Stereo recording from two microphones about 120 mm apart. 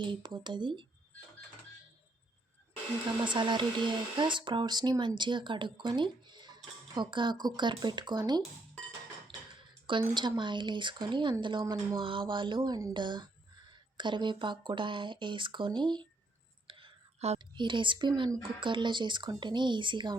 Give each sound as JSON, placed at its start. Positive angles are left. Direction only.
{"t": 0.0, "sound": "speech", "side_deg": -40}
{"t": 3.2, "sound": "speech", "side_deg": -40}
{"t": 9.8, "sound": "speech", "side_deg": -40}
{"t": 11.6, "sound": "speech", "side_deg": -30}
{"t": 11.9, "sound": "speech", "side_deg": -45}
{"t": 16.6, "sound": "whispering", "side_deg": -45}
{"t": 17.3, "sound": "speech", "side_deg": -40}